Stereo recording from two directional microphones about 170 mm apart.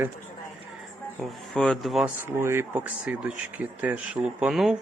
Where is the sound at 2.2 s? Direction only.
15° right (ahead or behind).